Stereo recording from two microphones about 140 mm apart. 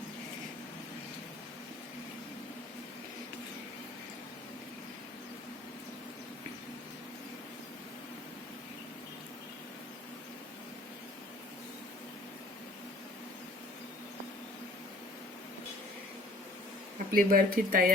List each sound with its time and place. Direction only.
17.1 s speech: 90° right